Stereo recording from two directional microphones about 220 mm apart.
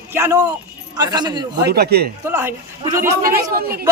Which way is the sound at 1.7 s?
45° right (ahead or behind).